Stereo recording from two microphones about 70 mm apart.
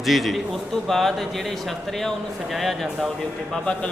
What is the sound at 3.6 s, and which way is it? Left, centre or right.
Speech, centre.